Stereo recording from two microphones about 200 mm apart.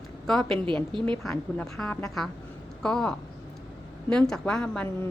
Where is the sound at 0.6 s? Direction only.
25° right (ahead or behind).